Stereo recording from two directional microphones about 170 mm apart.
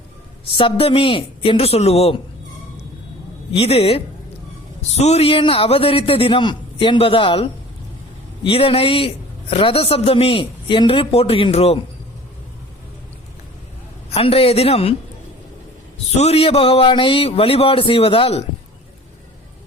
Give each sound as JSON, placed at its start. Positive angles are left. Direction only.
{"t": 0.5, "sound": "a man's voice", "side_deg": 30}
{"t": 3.5, "sound": "a man's voice", "side_deg": 35}
{"t": 14.1, "sound": "a man's voice", "side_deg": 35}
{"t": 16.1, "sound": "a man's voice", "side_deg": 40}